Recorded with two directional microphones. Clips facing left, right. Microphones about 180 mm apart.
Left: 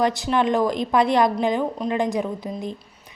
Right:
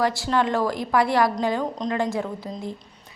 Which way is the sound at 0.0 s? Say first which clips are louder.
Left 2 dB; 20° left (ahead or behind).